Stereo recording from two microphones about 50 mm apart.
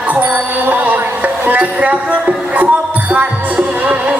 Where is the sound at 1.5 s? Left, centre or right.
Right.